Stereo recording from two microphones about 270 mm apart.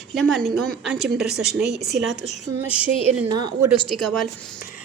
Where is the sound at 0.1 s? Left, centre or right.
Centre.